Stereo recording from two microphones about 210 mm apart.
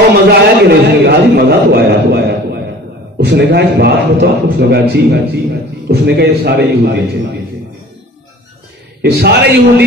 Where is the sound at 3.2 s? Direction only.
50° right (ahead or behind).